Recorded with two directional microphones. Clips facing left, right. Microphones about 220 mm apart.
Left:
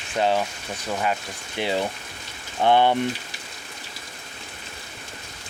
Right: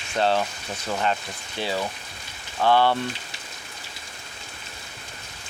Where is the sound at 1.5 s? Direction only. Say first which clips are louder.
Left 3 dB; 20° left (ahead or behind).